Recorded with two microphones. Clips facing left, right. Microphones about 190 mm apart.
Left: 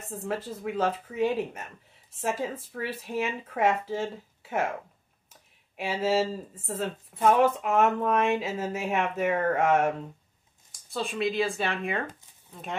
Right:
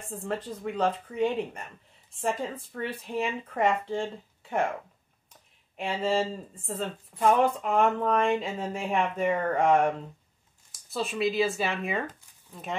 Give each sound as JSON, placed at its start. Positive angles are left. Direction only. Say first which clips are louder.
{"t": 0.1, "sound": "speech", "louder": "left 1 dB", "side_deg": 5}